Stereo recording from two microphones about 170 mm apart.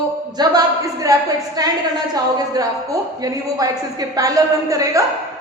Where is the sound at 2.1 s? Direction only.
20° right (ahead or behind).